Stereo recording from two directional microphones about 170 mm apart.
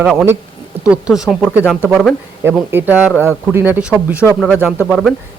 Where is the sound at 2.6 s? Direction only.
10° right (ahead or behind).